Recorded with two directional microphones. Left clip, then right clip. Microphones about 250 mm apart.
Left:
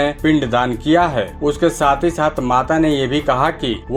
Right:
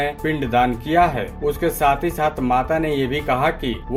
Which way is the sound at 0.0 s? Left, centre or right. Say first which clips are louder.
Left 6 dB; centre.